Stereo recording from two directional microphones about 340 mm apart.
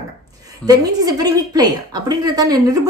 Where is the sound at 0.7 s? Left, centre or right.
Centre.